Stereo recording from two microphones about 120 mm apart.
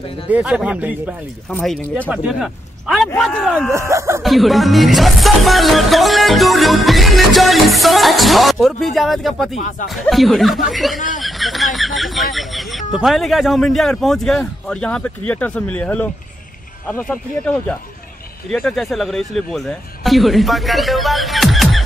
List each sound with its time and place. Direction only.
0.3 s a man's voice: 5° right (ahead or behind)
3.2 s music: 5° left (ahead or behind)
3.7 s speech: 25° right (ahead or behind)
4.2 s music: centre (ahead or behind)
11.1 s speech: centre (ahead or behind)
17.1 s speech: 10° left (ahead or behind)
18.5 s music: 5° left (ahead or behind)